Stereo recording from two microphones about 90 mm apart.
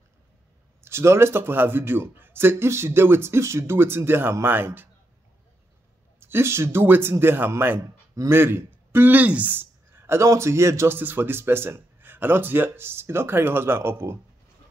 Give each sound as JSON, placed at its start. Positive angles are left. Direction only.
{"t": 0.7, "sound": "speech", "side_deg": -30}
{"t": 6.1, "sound": "speech", "side_deg": -25}